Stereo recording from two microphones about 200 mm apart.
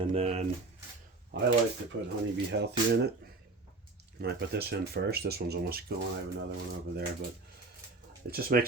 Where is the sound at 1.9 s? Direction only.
70° right (ahead or behind).